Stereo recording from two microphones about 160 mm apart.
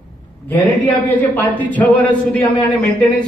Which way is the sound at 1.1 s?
10° left (ahead or behind).